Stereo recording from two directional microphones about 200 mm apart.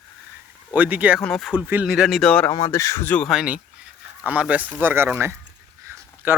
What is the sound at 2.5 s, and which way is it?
Speech, 20° left (ahead or behind).